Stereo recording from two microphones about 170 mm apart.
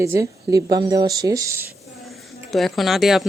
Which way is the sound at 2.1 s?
Centre (ahead or behind).